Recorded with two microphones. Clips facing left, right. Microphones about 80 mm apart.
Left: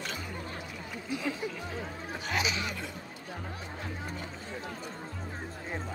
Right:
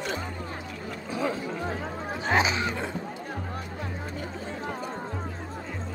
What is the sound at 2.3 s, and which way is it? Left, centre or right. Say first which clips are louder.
Music: right 8 dB; right.